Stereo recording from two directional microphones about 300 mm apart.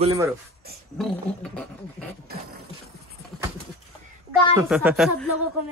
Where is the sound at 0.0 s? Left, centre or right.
Centre.